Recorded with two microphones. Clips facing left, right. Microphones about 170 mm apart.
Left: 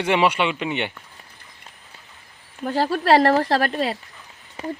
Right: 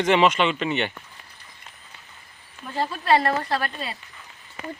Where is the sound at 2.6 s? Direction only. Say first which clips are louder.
Left 6 dB; 80° left.